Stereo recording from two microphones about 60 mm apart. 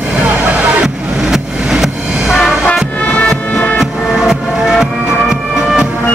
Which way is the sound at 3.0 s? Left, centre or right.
Left.